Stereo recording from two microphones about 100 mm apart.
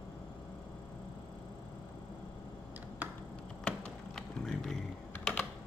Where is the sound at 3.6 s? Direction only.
5° left (ahead or behind).